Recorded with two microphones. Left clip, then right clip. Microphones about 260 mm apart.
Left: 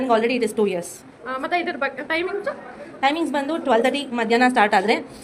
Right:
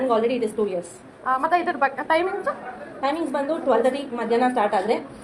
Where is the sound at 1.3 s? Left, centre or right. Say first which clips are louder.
Right 3 dB; centre.